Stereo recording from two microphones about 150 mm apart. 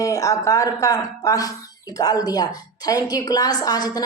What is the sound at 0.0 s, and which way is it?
A woman's voice, 20° left (ahead or behind).